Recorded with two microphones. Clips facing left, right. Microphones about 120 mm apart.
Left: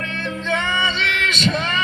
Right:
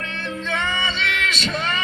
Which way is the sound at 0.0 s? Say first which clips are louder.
Left 3 dB; 30° right (ahead or behind).